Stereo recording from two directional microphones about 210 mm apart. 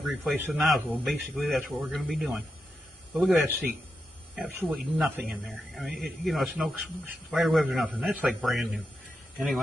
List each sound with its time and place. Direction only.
0.0 s speech: centre (ahead or behind)